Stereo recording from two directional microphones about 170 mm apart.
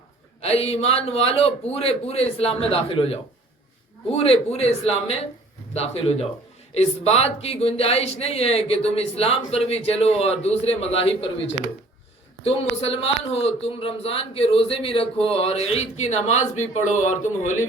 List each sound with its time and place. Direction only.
0.4 s a man's voice: 35° left (ahead or behind)